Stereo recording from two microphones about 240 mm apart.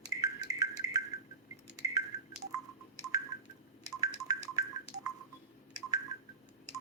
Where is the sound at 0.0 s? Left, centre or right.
Centre.